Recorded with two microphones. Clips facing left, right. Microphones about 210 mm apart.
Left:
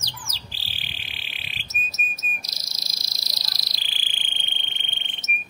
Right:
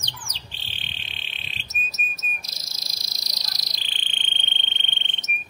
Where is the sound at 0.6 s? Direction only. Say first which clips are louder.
Even; 5° left (ahead or behind).